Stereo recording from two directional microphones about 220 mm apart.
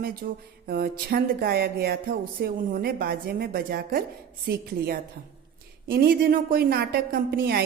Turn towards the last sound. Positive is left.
turn(degrees=-45)  # may be behind; listen again after turning